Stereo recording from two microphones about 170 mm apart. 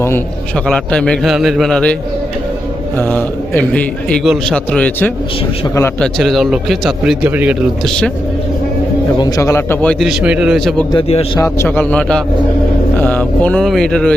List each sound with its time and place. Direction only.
0.7 s a man's voice: 5° left (ahead or behind)
3.0 s a man's voice: 10° left (ahead or behind); by 7.5 s 10° right (ahead or behind)
9.1 s a man's voice: 25° left (ahead or behind); by 10.8 s centre (ahead or behind)
10.9 s a man's voice: 35° left (ahead or behind)
11.3 s a man's voice: 15° left (ahead or behind)